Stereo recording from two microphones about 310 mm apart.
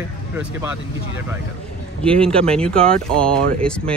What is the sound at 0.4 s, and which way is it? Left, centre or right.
Speech, centre.